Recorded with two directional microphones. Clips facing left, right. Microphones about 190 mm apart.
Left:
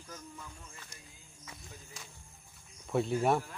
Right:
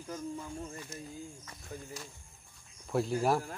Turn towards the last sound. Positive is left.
turn(degrees=0)  # may be behind; listen again after turning